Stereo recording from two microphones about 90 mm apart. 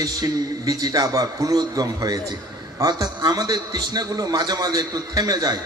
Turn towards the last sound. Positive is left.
turn(degrees=-45)  # may be behind; listen again after turning